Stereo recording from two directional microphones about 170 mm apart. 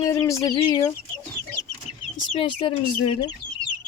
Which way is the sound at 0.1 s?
20° left (ahead or behind).